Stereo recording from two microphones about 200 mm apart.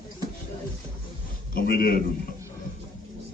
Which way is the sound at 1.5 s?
50° left (ahead or behind).